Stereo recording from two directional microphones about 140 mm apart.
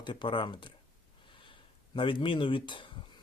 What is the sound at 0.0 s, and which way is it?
Speech, 35° left (ahead or behind).